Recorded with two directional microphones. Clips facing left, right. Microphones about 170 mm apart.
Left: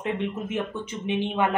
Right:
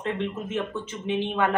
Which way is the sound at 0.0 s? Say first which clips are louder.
Left 1 dB; 15° left (ahead or behind).